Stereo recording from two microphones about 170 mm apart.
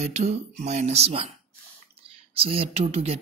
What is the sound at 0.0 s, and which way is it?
Speech, 40° right (ahead or behind).